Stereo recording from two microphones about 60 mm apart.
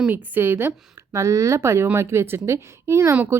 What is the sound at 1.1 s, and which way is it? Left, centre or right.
A woman's voice, right.